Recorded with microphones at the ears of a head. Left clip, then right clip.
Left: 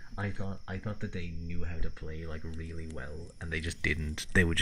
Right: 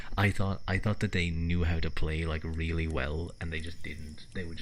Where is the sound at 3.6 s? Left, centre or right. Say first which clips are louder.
Left 11 dB; left.